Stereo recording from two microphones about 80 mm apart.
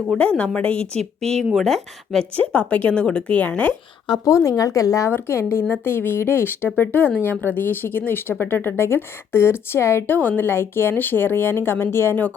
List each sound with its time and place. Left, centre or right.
0.1 s a woman's voice: centre
2.3 s a woman's voice: centre
4.3 s speech: left
5.1 s a woman's voice: left